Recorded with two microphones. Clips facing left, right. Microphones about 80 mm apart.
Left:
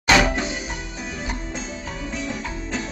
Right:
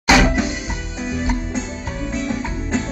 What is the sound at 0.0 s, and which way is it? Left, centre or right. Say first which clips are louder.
Music: right 3 dB; centre.